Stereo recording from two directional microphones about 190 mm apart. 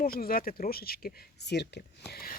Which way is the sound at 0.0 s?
50° left (ahead or behind).